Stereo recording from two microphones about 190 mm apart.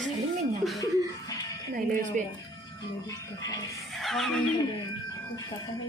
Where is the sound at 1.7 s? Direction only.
45° right (ahead or behind).